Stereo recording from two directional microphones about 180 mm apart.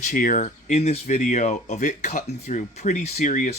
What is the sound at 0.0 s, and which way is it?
Speech, 45° left (ahead or behind).